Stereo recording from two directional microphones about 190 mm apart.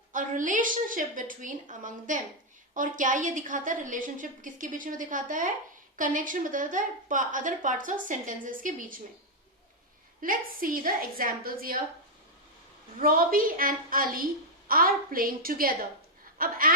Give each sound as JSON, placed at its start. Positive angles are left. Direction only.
{"t": 0.1, "sound": "a woman's voice", "side_deg": -45}
{"t": 10.2, "sound": "a woman's voice", "side_deg": -45}
{"t": 13.0, "sound": "a woman's voice", "side_deg": -50}